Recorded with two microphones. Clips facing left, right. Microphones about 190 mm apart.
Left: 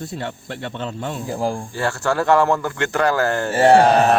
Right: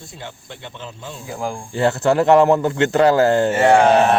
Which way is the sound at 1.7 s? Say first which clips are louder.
Right 10 dB; 20° right (ahead or behind).